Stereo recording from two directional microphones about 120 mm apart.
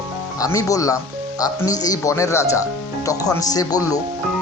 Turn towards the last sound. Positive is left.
turn(degrees=30)  # may be behind; listen again after turning